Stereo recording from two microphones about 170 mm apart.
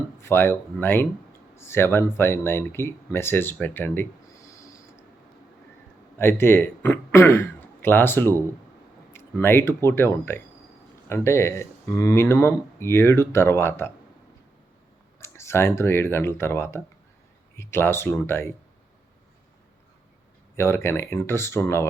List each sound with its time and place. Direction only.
0.2 s speech: 15° left (ahead or behind)
4.4 s a sound: 20° left (ahead or behind)
6.1 s a man's voice: 15° left (ahead or behind)
15.2 s speech: 15° left (ahead or behind)
20.6 s speech: 15° left (ahead or behind)